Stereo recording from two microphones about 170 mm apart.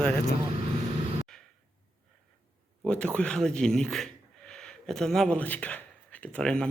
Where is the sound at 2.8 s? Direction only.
5° left (ahead or behind).